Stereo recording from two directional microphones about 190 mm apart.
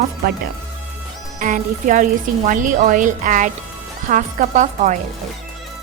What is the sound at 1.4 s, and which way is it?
A woman's voice, 45° right (ahead or behind).